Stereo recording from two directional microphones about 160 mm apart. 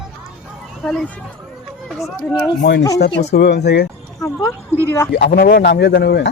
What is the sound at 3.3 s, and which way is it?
Speech, 85° left.